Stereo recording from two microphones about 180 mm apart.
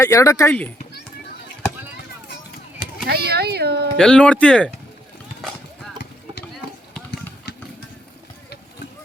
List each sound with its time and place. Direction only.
0.0 s speech: 20° left (ahead or behind)
3.1 s speech: 60° right (ahead or behind)
3.9 s speech: 5° left (ahead or behind)